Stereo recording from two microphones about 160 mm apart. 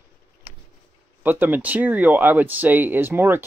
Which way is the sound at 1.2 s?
10° right (ahead or behind).